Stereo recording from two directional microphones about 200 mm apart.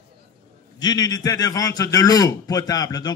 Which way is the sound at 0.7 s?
20° left (ahead or behind).